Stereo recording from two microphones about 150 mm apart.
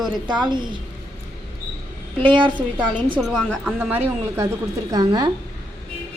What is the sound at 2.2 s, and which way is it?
Speech, 35° right (ahead or behind).